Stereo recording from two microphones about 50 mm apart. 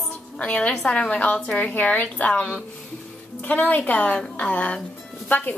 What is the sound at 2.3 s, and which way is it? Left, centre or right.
Speech, centre.